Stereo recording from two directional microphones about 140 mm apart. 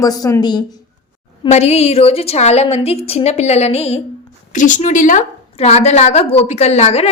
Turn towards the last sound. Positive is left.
turn(degrees=50)  # may be behind; listen again after turning